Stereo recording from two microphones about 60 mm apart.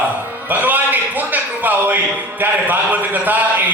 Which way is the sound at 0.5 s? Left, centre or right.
Right.